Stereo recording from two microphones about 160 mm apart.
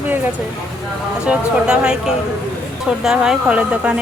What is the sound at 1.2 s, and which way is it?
Speech, 5° right (ahead or behind).